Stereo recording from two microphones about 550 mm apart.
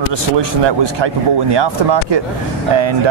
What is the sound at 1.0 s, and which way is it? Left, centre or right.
Speech, right.